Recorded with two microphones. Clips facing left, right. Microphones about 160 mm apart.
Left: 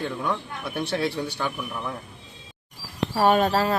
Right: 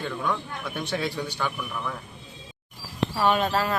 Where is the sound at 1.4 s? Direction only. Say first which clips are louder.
Left 1 dB; 25° left (ahead or behind).